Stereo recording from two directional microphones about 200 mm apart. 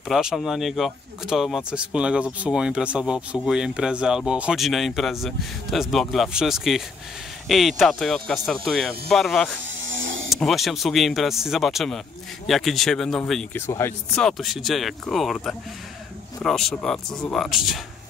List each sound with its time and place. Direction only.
0.1 s speech: centre (ahead or behind)
9.8 s power windows: 65° right (ahead or behind)
10.3 s speech: centre (ahead or behind)